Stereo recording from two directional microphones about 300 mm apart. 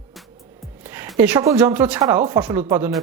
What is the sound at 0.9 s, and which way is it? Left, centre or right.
Speech, centre.